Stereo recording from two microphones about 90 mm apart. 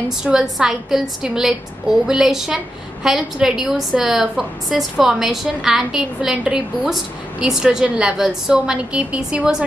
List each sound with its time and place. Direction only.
0.2 s a woman's voice: 5° right (ahead or behind)